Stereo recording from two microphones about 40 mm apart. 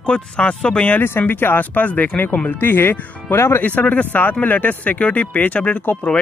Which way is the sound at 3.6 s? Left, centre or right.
Left.